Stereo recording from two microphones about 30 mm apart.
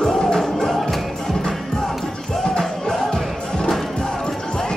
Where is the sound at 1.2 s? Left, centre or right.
Centre.